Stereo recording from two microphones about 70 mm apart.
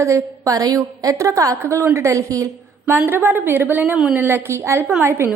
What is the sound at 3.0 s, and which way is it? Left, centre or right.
A woman's voice, right.